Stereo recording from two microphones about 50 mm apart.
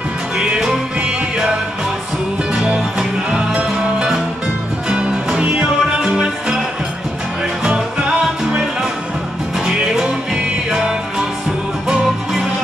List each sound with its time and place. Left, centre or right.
0.4 s music: centre
2.5 s music: centre
4.8 s music: centre
9.7 s music: centre